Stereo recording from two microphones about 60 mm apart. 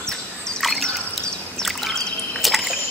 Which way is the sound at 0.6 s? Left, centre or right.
Centre.